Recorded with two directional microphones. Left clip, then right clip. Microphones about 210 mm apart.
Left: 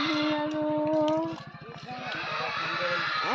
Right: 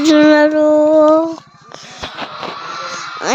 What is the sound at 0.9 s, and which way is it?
Child singing, 50° right (ahead or behind).